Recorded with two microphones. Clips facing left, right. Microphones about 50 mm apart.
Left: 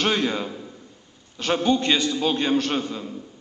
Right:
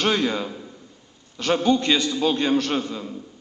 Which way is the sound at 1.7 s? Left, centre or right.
Left.